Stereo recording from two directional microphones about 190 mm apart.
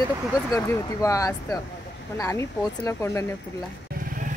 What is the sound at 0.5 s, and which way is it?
Speech, 15° left (ahead or behind).